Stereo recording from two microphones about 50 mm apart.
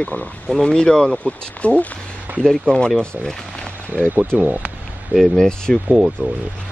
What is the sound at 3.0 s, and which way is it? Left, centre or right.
Speech, centre.